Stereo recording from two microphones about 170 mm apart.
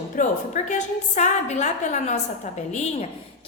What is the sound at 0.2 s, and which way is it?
A woman's voice, 45° left (ahead or behind).